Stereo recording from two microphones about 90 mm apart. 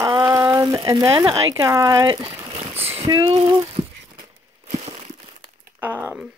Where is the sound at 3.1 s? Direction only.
40° right (ahead or behind).